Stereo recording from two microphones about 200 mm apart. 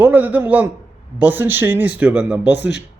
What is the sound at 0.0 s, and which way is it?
Speech, 10° right (ahead or behind).